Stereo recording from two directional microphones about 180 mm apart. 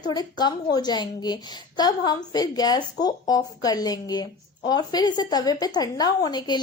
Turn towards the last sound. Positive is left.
turn(degrees=25)  # may be behind; listen again after turning